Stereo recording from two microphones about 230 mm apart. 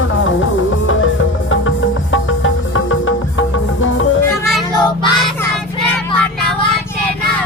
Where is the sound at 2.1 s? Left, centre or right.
Left.